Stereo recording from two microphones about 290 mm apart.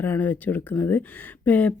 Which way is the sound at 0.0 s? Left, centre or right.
Centre.